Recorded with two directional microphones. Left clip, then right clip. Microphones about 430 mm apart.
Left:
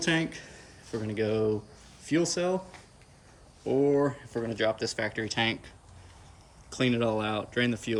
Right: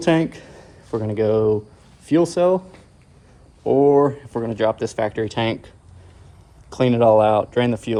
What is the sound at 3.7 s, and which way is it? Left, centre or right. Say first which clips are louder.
Speech: right 10 dB; centre.